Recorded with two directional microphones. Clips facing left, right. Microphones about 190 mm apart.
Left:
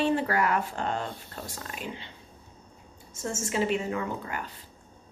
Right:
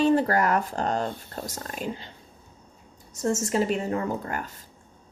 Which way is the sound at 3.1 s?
40° right (ahead or behind).